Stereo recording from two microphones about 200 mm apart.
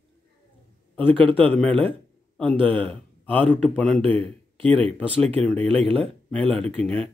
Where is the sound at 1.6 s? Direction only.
5° left (ahead or behind).